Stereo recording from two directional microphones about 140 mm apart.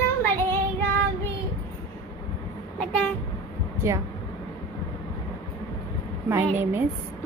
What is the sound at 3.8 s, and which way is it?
Speech, 20° right (ahead or behind).